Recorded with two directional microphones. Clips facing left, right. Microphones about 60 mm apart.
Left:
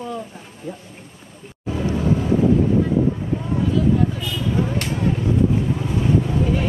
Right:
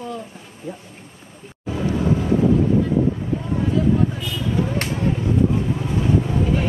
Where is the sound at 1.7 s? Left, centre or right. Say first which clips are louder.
Even; centre.